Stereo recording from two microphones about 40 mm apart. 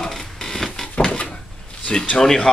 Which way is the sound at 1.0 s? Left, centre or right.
Left.